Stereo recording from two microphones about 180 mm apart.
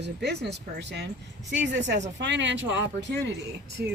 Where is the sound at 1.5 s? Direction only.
85° right.